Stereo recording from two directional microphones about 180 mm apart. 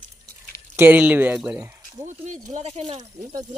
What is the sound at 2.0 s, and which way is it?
Speech, 45° right (ahead or behind).